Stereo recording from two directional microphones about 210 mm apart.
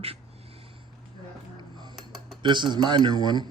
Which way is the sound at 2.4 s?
20° right (ahead or behind).